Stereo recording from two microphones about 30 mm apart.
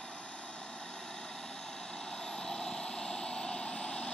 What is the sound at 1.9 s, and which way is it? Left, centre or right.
Vehicle, left.